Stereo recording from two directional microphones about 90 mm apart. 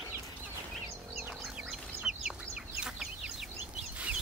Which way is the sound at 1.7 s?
5° right (ahead or behind).